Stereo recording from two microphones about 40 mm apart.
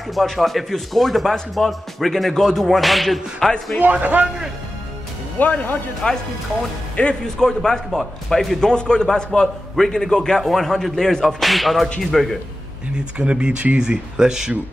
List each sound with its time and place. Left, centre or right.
0.1 s speech: centre
4.0 s a man's voice: right
5.4 s speech: left
7.0 s a man's voice: left
7.3 s a man's voice: centre
7.9 s speech: centre
8.5 s a man's voice: centre
10.5 s speech: centre
12.9 s speech: right
13.7 s speech: centre